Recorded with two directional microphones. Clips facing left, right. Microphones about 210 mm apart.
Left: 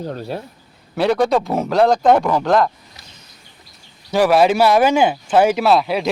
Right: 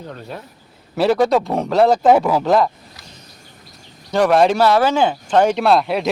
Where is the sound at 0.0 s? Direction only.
35° left (ahead or behind).